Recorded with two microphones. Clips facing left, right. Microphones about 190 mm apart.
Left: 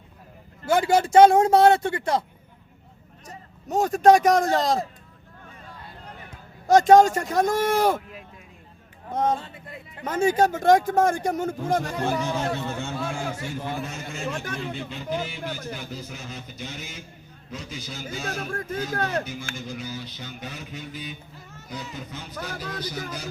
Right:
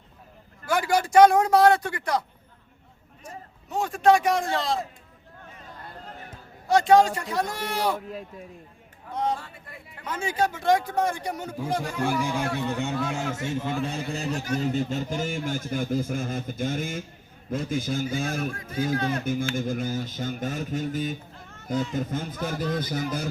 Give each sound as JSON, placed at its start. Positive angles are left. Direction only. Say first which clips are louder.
{"t": 0.6, "sound": "speech", "louder": "left 4 dB", "side_deg": 25}
{"t": 3.2, "sound": "a man's voice", "louder": "left 4 dB", "side_deg": 40}
{"t": 6.7, "sound": "speech", "louder": "left 4 dB", "side_deg": 45}
{"t": 9.3, "sound": "speech", "louder": "left 4 dB", "side_deg": 20}
{"t": 10.0, "sound": "speech", "louder": "left 6 dB", "side_deg": 45}
{"t": 12.2, "sound": "a man's voice", "louder": "even", "side_deg": -10}
{"t": 13.8, "sound": "a man's voice", "louder": "right 3 dB", "side_deg": -35}
{"t": 18.5, "sound": "speech", "louder": "left 10 dB", "side_deg": 50}
{"t": 19.2, "sound": "speech", "louder": "right 8 dB", "side_deg": -50}